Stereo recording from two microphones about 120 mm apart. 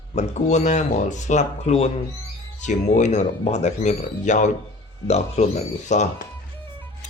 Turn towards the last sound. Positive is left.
turn(degrees=75)  # may be behind; listen again after turning